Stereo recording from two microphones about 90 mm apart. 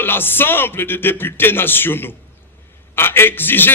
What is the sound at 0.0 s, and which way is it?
A man's voice, 25° left (ahead or behind).